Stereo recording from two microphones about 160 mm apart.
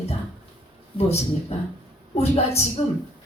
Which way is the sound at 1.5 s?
40° left (ahead or behind).